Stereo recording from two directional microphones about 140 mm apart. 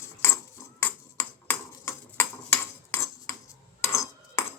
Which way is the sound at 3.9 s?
20° left (ahead or behind).